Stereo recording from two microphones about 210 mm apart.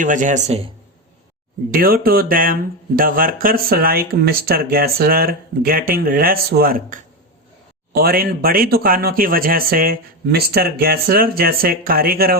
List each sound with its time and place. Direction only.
0.0 s speech: 35° right (ahead or behind)
1.7 s speech: 45° right (ahead or behind)